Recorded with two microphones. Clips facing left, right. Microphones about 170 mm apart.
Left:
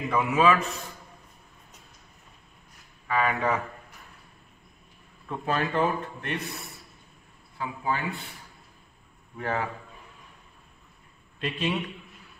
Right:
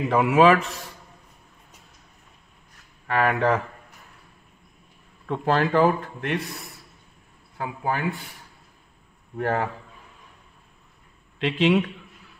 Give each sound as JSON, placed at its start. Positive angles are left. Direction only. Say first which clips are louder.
{"t": 0.1, "sound": "a man's voice", "louder": "right 5 dB", "side_deg": -75}
{"t": 3.1, "sound": "a man's voice", "louder": "right 4 dB", "side_deg": -70}
{"t": 5.3, "sound": "speech", "louder": "right 6 dB", "side_deg": -80}
{"t": 7.5, "sound": "speech", "louder": "right 3 dB", "side_deg": -60}
{"t": 9.4, "sound": "a man's voice", "louder": "right 5 dB", "side_deg": -55}
{"t": 11.3, "sound": "speech", "louder": "right 9 dB", "side_deg": -90}